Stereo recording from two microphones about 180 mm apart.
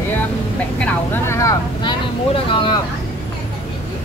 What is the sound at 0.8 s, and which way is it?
Speech, 15° left (ahead or behind).